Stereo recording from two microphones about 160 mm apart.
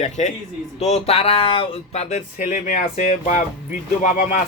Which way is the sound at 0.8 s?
45° left (ahead or behind).